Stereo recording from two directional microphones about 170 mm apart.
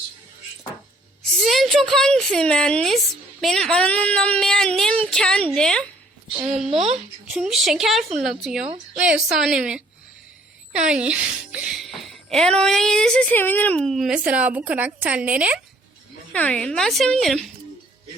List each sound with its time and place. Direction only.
1.3 s a woman's voice: centre (ahead or behind)
6.4 s speech: 40° right (ahead or behind)
7.3 s speech: 5° right (ahead or behind)
16.3 s speech: 5° left (ahead or behind)